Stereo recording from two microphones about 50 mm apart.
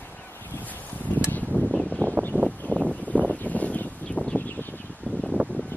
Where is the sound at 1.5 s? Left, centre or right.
Left.